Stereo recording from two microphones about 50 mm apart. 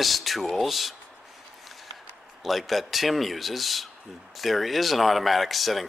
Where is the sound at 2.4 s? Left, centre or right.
Centre.